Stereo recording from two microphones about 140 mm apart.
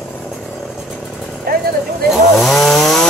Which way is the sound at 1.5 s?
90° right.